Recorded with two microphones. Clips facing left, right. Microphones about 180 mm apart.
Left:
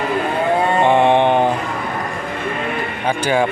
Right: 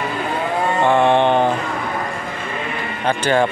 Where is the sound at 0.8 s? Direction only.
20° left (ahead or behind).